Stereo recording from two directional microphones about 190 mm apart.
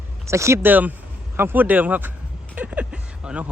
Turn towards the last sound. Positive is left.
turn(degrees=-5)  # may be behind; listen again after turning